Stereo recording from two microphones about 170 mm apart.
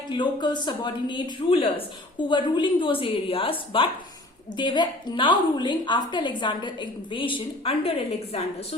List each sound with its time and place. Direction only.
0.1 s a woman's voice: 25° left (ahead or behind)